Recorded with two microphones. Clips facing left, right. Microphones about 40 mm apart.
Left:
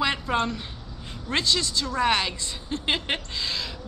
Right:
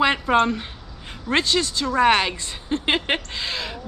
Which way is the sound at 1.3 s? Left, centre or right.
Right.